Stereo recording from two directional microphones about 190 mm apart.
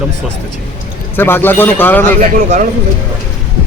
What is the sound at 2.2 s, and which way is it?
Speech, 40° right (ahead or behind).